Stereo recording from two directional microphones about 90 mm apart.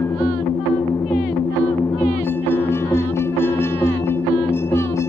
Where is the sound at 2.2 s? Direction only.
25° left (ahead or behind).